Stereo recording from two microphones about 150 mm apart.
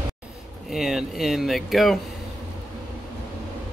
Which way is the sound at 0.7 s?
Centre (ahead or behind).